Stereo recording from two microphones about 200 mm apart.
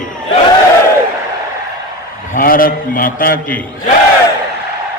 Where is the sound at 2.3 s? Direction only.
45° left (ahead or behind).